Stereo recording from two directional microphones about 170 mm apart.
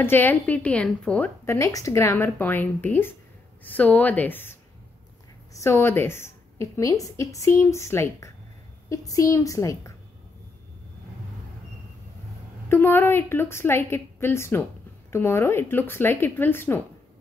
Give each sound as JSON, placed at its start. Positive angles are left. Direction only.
{"t": 0.0, "sound": "a woman's voice", "side_deg": 10}
{"t": 12.6, "sound": "a woman's voice", "side_deg": 15}